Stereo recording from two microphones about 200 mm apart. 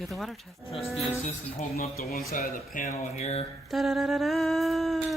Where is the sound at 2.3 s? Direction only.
40° left (ahead or behind).